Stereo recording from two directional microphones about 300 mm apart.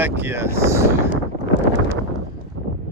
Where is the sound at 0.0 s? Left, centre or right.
Centre.